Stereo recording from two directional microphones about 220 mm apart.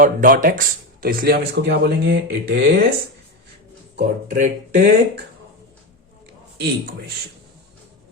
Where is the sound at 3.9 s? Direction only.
35° right (ahead or behind).